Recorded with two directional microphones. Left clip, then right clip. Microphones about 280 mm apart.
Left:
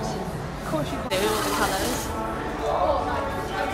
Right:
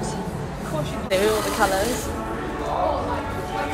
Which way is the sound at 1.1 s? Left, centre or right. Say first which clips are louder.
Right 4 dB; centre.